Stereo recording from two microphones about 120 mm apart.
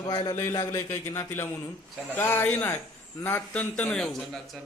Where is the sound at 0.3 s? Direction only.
20° left (ahead or behind).